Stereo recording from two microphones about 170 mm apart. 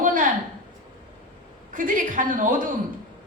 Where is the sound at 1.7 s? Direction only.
50° right (ahead or behind).